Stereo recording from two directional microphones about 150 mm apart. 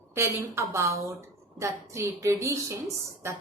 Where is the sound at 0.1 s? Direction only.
15° right (ahead or behind).